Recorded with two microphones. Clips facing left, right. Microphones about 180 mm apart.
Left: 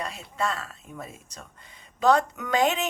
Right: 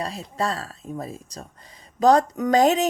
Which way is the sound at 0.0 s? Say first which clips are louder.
Right 3 dB; 35° right (ahead or behind).